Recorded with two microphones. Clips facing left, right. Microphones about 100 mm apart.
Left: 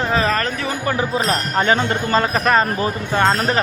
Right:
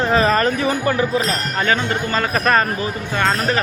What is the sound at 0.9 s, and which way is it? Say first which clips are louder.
Speech: even; 30° left (ahead or behind).